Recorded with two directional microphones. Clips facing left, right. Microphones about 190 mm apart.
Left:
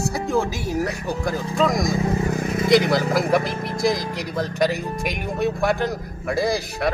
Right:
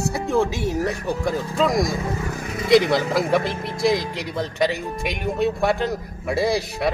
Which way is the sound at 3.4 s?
30° right (ahead or behind).